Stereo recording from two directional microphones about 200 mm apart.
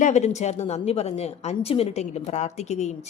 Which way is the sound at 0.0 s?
35° left (ahead or behind).